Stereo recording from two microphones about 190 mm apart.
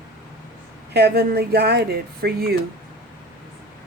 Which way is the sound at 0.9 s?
55° right (ahead or behind).